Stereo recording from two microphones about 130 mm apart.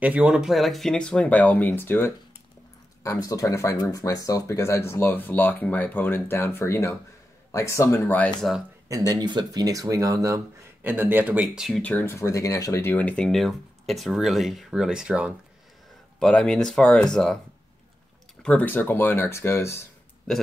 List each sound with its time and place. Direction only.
0.0 s speech: 10° right (ahead or behind); by 8.3 s 15° left (ahead or behind)
8.4 s speech: centre (ahead or behind)
8.8 s speech: 25° right (ahead or behind)
10.8 s speech: 15° right (ahead or behind)
11.4 s speech: centre (ahead or behind)
11.8 s speech: 15° left (ahead or behind); by 15.3 s 5° right (ahead or behind)
16.2 s speech: 5° left (ahead or behind)
18.4 s speech: 10° left (ahead or behind)
20.3 s speech: 5° left (ahead or behind)